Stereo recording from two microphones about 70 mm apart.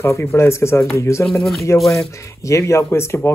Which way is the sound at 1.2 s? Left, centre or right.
Centre.